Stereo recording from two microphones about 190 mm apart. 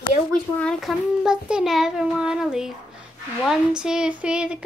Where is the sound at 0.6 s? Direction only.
Centre (ahead or behind).